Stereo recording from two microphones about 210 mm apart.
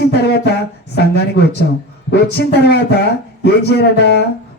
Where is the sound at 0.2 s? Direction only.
50° left (ahead or behind).